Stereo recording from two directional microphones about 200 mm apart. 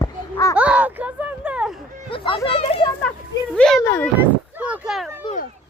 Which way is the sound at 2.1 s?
25° left (ahead or behind).